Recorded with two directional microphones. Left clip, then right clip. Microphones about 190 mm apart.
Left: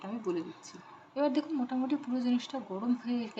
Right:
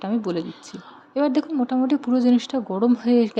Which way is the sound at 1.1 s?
35° right (ahead or behind).